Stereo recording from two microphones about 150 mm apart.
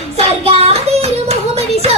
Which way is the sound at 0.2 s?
45° right (ahead or behind).